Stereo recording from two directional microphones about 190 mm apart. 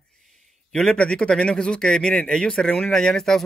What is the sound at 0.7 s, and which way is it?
A man's voice, 5° left (ahead or behind).